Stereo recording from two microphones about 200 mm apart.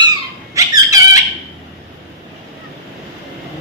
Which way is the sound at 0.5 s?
15° right (ahead or behind).